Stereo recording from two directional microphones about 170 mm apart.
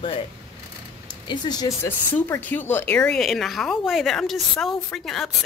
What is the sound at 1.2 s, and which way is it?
Speech, 25° left (ahead or behind).